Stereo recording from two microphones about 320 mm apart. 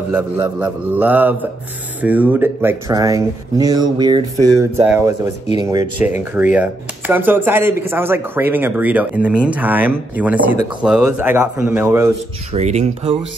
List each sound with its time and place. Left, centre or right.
0.1 s speech: centre
12.5 s speech: centre